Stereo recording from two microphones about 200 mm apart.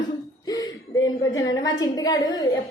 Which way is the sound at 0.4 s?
20° left (ahead or behind).